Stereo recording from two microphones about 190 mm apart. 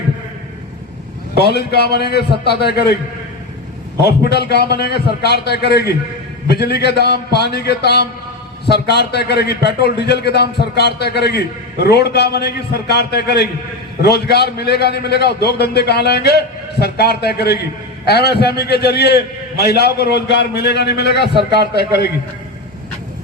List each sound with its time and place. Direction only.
1.4 s a man's voice: 55° left (ahead or behind)
4.0 s a man's voice: 55° left (ahead or behind)